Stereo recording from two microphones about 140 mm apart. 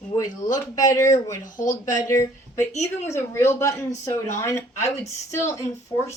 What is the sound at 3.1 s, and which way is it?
Speech, 20° left (ahead or behind).